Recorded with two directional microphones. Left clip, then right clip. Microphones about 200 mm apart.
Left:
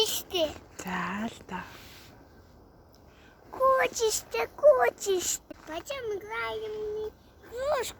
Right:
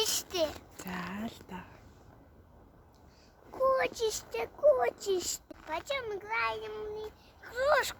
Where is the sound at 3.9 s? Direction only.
5° right (ahead or behind).